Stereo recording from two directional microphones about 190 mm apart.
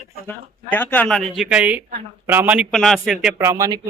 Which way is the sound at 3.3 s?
15° right (ahead or behind).